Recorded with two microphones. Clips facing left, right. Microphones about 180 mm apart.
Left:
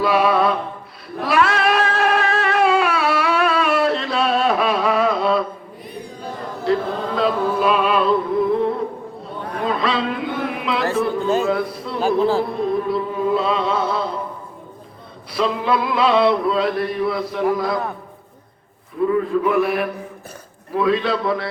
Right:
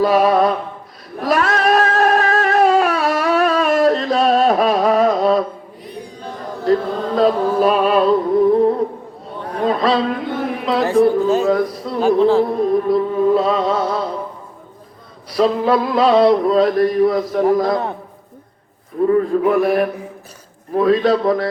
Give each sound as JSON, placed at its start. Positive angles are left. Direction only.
{"t": 0.0, "sound": "mantra", "side_deg": -40}
{"t": 1.2, "sound": "cat", "side_deg": -40}
{"t": 6.7, "sound": "chant", "side_deg": -40}
{"t": 7.2, "sound": "music", "side_deg": -40}
{"t": 9.6, "sound": "a sound", "side_deg": -40}
{"t": 10.9, "sound": "chant", "side_deg": -40}
{"t": 11.4, "sound": "a sound", "side_deg": -40}
{"t": 11.9, "sound": "a man's voice", "side_deg": 0}
{"t": 12.5, "sound": "chant", "side_deg": -40}
{"t": 15.3, "sound": "chant", "side_deg": -40}
{"t": 19.0, "sound": "a sound", "side_deg": -40}
{"t": 20.7, "sound": "chant", "side_deg": -40}